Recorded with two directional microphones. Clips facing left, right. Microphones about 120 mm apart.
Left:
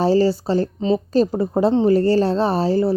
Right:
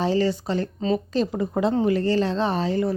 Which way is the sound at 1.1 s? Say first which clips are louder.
Left 6 dB; 35° left (ahead or behind).